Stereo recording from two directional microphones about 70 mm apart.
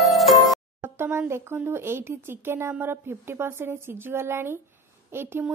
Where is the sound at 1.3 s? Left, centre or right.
Right.